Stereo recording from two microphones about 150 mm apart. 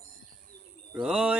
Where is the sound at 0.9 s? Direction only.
5° right (ahead or behind).